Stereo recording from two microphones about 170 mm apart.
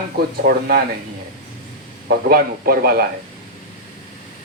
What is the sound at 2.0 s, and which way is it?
Speech, 60° right (ahead or behind).